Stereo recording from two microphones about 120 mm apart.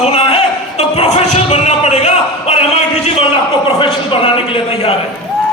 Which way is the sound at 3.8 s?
45° left (ahead or behind).